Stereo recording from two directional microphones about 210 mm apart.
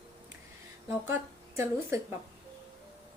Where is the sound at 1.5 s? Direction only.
10° right (ahead or behind).